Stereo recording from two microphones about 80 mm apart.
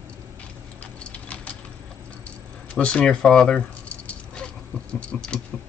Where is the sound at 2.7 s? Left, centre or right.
Centre.